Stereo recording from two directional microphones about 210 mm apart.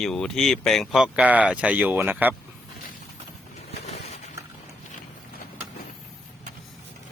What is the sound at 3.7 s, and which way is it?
Vehicle, 30° left (ahead or behind).